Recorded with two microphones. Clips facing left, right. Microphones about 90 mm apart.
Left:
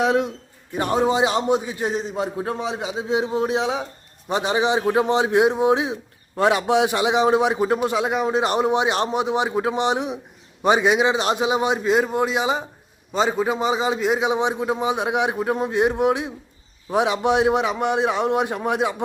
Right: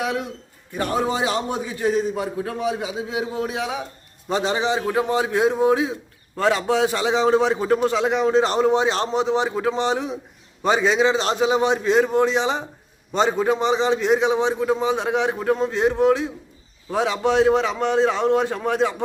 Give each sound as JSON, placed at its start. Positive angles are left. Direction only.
{"t": 0.0, "sound": "a man's voice", "side_deg": 30}